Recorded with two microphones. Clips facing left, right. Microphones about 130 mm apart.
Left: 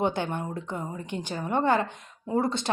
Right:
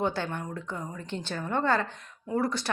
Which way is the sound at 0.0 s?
20° left (ahead or behind).